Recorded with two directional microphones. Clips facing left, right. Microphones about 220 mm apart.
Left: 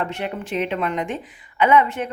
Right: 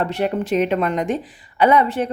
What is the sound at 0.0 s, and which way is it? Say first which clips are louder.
Speech: right 6 dB; 35° right (ahead or behind).